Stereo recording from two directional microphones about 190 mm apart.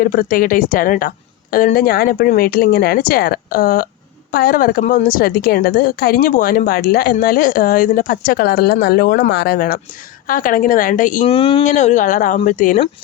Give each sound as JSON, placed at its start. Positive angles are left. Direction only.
{"t": 0.0, "sound": "a woman's voice", "side_deg": 50}
{"t": 11.3, "sound": "speech", "side_deg": 25}
{"t": 11.6, "sound": "speech", "side_deg": 40}